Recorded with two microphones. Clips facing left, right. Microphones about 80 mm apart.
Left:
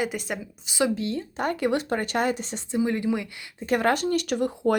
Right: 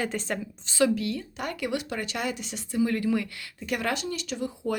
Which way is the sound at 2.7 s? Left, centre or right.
Left.